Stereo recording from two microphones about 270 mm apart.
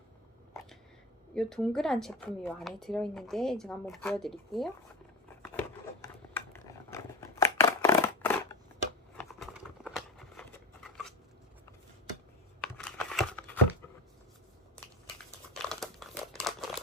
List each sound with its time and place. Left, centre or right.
1.4 s speech: centre
5.4 s a sound: centre
10.8 s scissors: centre
12.6 s crumpling: centre
15.5 s crumpling: centre